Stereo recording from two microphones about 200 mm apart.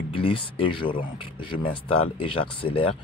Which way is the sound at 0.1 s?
25° left (ahead or behind).